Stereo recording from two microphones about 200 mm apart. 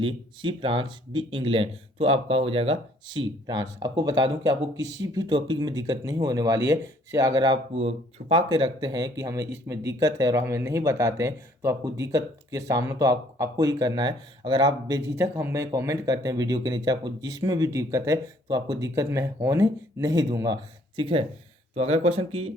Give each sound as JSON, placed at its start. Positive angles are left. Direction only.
{"t": 0.0, "sound": "speech", "side_deg": -25}